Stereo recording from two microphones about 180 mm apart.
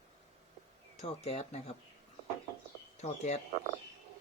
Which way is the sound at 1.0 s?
35° left (ahead or behind).